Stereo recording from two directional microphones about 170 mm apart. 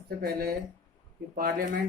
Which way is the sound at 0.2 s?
60° right (ahead or behind).